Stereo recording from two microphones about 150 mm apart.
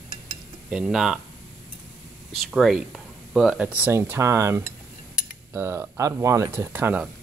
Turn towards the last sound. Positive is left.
turn(degrees=-10)  # may be behind; listen again after turning